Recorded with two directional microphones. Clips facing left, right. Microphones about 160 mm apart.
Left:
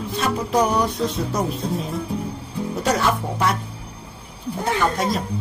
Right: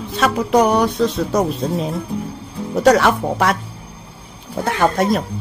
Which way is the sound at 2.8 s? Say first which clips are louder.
Right 8 dB; 75° right (ahead or behind).